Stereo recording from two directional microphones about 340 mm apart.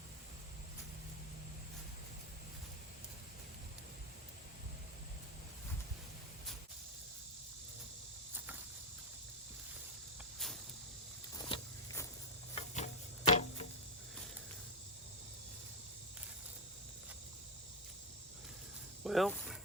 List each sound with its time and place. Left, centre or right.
10.3 s cricket: centre
11.3 s vehicle: centre
12.5 s tick-tock: centre
19.0 s snake: centre